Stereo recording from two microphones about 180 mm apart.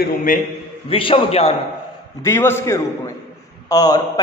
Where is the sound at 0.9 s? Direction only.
30° left (ahead or behind).